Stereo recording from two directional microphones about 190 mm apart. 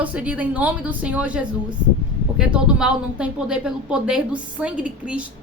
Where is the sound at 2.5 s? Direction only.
5° right (ahead or behind).